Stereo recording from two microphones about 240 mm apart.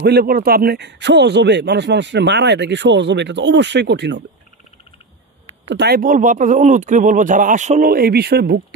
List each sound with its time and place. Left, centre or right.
0.0 s speech: right
5.7 s speech: right